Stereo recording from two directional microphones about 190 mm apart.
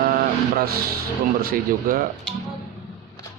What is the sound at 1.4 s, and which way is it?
Speech, 50° right (ahead or behind).